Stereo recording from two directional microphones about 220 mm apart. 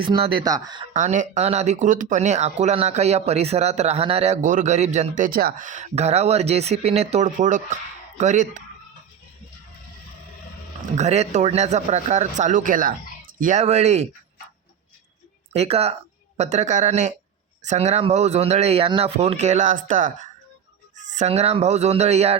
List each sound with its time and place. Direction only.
0.0 s speech: 25° right (ahead or behind)
0.9 s speech: 35° right (ahead or behind)
10.9 s speech: 30° right (ahead or behind)
15.5 s speech: 25° right (ahead or behind)